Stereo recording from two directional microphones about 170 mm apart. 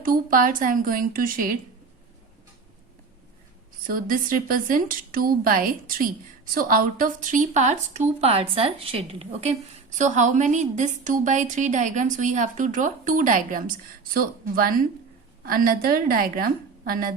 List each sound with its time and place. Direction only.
0.0 s a woman's voice: 55° right (ahead or behind)
3.8 s a woman's voice: 55° right (ahead or behind)